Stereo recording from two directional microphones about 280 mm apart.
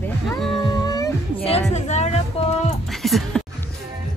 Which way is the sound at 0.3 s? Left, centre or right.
Centre.